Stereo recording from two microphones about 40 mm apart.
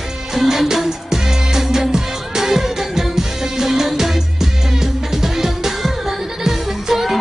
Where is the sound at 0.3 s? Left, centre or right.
Centre.